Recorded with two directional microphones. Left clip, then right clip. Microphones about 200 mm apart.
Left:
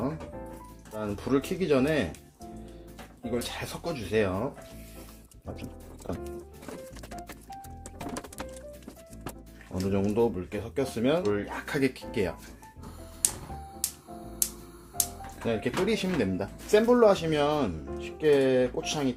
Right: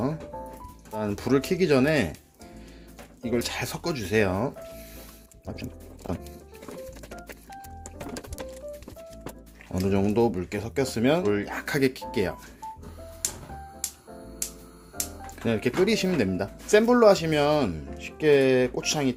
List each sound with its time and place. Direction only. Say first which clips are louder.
0.9 s speech: right 4 dB; 45° right (ahead or behind)
3.2 s speech: right 5 dB; 45° right (ahead or behind)
6.0 s music: right 3 dB; 45° right (ahead or behind)
9.9 s speech: right 2 dB; 40° right (ahead or behind)
12.1 s speech: right 2 dB; 25° right (ahead or behind)
15.4 s speech: right 4 dB; 50° right (ahead or behind)
16.4 s speech: right 3 dB; 30° right (ahead or behind)